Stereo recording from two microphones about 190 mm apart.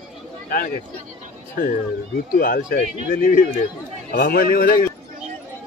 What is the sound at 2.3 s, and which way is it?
Speech, 45° left (ahead or behind).